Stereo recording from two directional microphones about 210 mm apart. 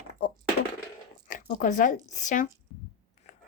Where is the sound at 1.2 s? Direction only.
40° left (ahead or behind).